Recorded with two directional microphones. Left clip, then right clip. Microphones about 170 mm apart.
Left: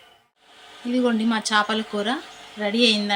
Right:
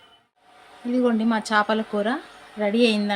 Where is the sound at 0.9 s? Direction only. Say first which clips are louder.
Even; 25° right (ahead or behind).